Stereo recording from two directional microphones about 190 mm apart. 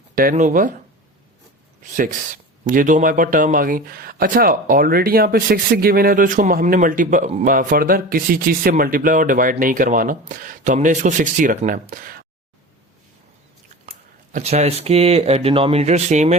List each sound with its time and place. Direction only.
0.2 s speech: 45° right (ahead or behind)
1.8 s speech: 40° right (ahead or behind)
14.3 s speech: 35° right (ahead or behind)